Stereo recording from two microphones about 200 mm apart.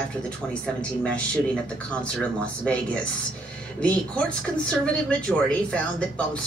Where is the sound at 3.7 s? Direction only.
5° left (ahead or behind).